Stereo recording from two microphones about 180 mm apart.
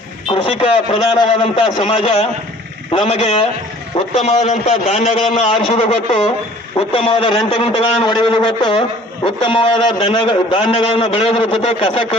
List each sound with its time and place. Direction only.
0.3 s a man's voice: 30° left (ahead or behind)